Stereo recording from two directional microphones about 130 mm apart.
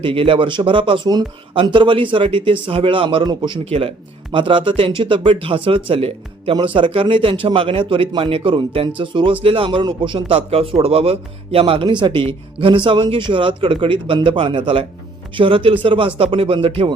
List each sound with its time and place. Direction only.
0.0 s a man's voice: 45° right (ahead or behind)